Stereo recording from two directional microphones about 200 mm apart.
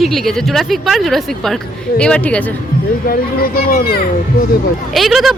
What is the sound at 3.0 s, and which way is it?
Speech, 50° left (ahead or behind).